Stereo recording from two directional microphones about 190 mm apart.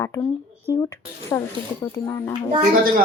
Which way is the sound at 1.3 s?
15° left (ahead or behind).